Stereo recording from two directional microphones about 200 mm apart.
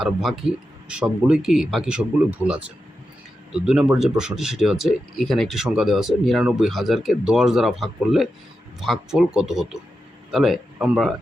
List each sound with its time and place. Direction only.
0.0 s speech: centre (ahead or behind)